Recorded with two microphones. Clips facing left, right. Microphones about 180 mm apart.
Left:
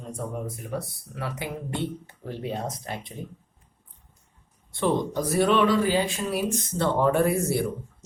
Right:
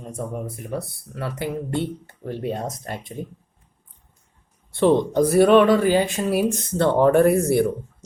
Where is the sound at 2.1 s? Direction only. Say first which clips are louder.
Right 5 dB; 50° right (ahead or behind).